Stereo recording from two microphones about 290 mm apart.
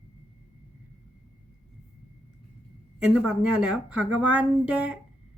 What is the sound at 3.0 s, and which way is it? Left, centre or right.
Speech, centre.